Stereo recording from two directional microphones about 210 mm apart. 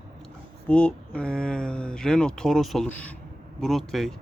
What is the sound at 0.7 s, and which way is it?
Speech, 5° left (ahead or behind).